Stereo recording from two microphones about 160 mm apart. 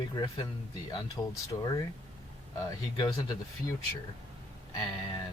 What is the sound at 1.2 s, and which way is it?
Speech, 15° left (ahead or behind).